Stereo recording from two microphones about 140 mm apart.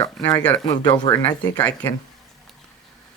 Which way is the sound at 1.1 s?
40° left (ahead or behind).